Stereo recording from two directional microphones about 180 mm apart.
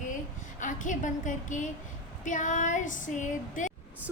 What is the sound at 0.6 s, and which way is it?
Female singing, 45° left (ahead or behind).